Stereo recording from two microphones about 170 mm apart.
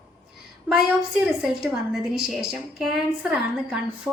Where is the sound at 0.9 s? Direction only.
5° right (ahead or behind).